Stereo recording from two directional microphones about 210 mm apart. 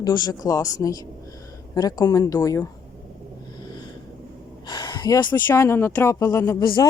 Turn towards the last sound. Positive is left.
turn(degrees=20)  # may be behind; listen again after turning